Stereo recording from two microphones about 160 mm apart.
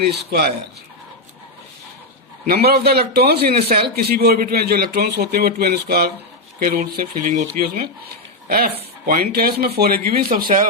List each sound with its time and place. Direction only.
0.0 s a man's voice: 90° right
2.5 s a man's voice: 85° right; by 10.7 s 60° right (ahead or behind)